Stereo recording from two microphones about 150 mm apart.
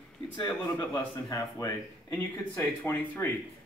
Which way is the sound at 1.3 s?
25° left (ahead or behind).